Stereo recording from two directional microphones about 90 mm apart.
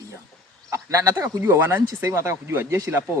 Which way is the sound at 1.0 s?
30° right (ahead or behind).